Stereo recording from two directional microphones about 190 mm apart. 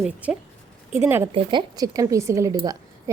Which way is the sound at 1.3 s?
25° right (ahead or behind).